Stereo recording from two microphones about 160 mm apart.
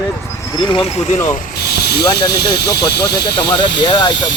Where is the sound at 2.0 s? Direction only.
25° left (ahead or behind).